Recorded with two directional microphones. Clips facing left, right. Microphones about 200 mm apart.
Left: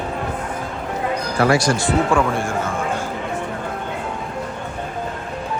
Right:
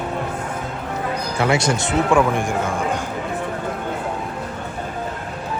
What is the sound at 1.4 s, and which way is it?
Speech, 25° right (ahead or behind).